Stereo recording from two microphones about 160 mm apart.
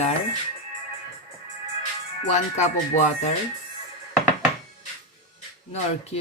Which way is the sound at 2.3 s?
45° left (ahead or behind).